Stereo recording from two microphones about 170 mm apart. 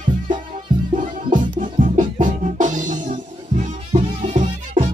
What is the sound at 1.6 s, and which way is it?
Music, 50° right (ahead or behind).